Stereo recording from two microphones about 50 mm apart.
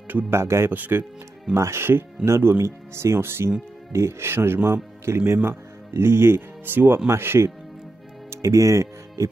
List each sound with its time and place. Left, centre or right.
0.3 s speech: right
0.7 s speech: right
1.5 s speech: right
2.2 s speech: right
3.2 s speech: right
7.1 s speech: right
8.3 s speech: right